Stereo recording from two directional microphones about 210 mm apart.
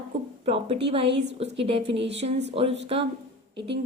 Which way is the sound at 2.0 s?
55° right (ahead or behind).